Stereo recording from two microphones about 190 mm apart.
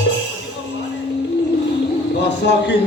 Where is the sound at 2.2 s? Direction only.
65° left (ahead or behind).